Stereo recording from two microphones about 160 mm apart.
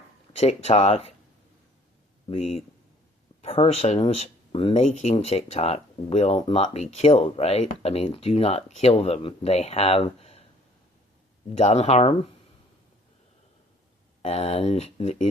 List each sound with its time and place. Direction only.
0.3 s speech: 40° left (ahead or behind)
2.3 s speech: 40° left (ahead or behind)
11.5 s speech: 45° left (ahead or behind)
14.2 s speech: 40° left (ahead or behind)